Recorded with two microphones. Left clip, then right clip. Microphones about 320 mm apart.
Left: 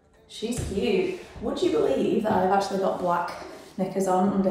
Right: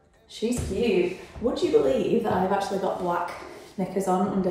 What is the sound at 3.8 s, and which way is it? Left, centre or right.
Speech, centre.